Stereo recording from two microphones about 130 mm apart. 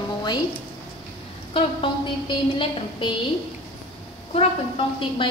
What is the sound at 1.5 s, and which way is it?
A woman's voice, 40° left (ahead or behind).